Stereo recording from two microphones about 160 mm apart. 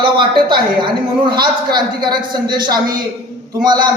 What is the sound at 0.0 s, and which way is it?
A man's voice, 30° right (ahead or behind).